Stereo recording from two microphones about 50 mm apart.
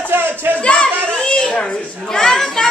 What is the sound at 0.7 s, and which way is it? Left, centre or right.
Children playing, centre.